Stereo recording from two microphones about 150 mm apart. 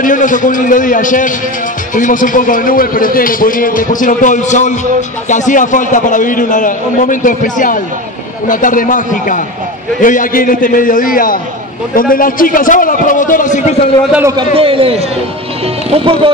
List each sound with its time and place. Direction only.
0.0 s a man's voice: 60° left (ahead or behind)
14.2 s a man's voice: 30° right (ahead or behind)